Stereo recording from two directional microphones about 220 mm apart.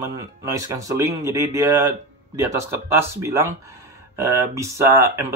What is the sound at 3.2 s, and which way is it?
A man's voice, 10° right (ahead or behind).